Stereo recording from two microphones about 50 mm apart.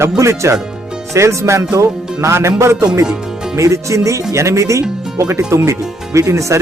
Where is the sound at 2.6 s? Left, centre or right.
Right.